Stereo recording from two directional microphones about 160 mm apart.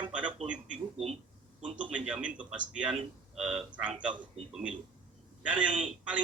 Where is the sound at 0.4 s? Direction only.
5° right (ahead or behind).